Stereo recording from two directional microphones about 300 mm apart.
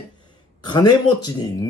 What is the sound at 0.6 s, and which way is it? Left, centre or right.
Speech, centre.